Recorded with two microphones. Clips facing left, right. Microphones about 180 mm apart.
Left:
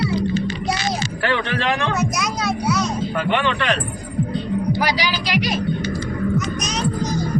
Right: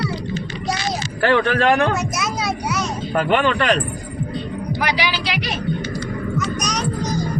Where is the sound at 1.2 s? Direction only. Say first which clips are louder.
Right 6 dB; 50° right (ahead or behind).